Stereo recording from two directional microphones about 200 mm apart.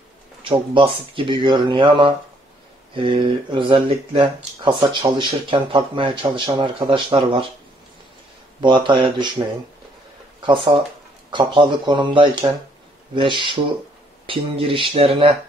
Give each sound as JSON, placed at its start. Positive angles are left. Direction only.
{"t": 0.4, "sound": "speech", "side_deg": -25}
{"t": 8.5, "sound": "speech", "side_deg": -25}
{"t": 10.4, "sound": "speech", "side_deg": -25}